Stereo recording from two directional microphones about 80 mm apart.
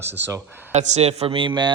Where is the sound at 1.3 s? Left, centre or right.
Right.